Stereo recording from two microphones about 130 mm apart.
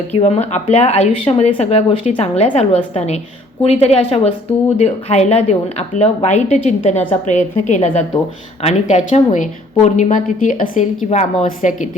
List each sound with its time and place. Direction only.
0.2 s a woman's voice: 55° left (ahead or behind)